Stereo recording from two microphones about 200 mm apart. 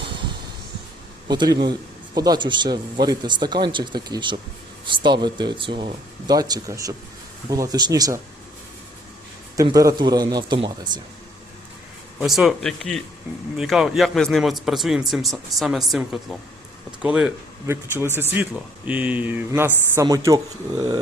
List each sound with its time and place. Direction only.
1.3 s speech: 20° right (ahead or behind)
9.6 s speech: 15° right (ahead or behind)
12.2 s a man's voice: centre (ahead or behind)
17.0 s speech: 5° right (ahead or behind)